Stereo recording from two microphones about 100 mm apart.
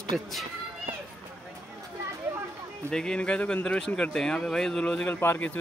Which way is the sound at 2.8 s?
10° left (ahead or behind).